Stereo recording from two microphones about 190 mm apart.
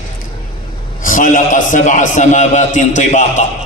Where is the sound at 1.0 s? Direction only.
45° left (ahead or behind).